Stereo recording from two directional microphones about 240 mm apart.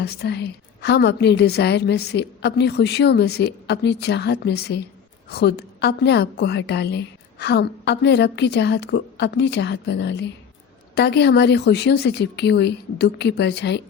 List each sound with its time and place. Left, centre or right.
0.0 s a woman's voice: left